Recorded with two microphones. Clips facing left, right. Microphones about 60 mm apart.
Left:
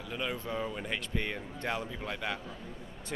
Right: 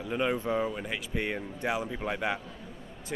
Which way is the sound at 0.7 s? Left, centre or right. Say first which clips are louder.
Right 2 dB; centre.